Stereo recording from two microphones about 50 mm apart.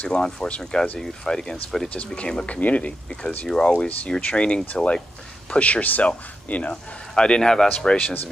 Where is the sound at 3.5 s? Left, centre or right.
Centre.